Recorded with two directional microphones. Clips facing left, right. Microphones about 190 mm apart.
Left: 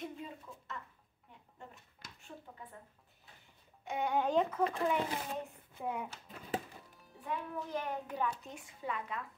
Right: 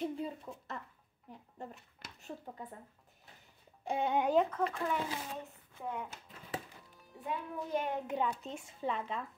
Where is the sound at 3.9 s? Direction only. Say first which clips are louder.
Right 2 dB; 30° right (ahead or behind).